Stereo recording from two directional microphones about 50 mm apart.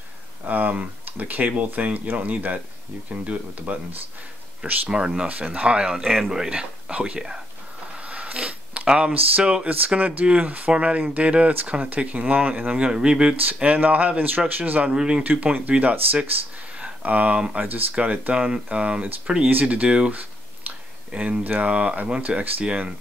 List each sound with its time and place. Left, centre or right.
0.5 s speech: right
4.8 s speech: centre
6.6 s speech: right
8.0 s a sound: right
9.4 s speech: centre
9.8 s speech: right
13.7 s speech: right
15.0 s speech: centre
15.4 s speech: right
16.7 s a sound: right
17.6 s speech: right
20.7 s a sound: right
21.1 s speech: right